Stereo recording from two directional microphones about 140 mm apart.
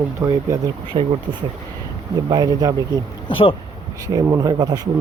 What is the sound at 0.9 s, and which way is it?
Speech, 40° right (ahead or behind).